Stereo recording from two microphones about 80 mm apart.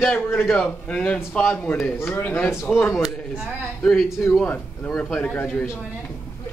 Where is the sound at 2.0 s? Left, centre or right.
Left.